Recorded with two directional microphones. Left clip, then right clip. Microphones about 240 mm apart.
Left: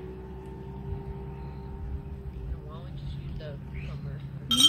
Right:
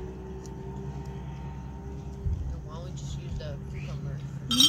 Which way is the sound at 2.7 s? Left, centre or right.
Right.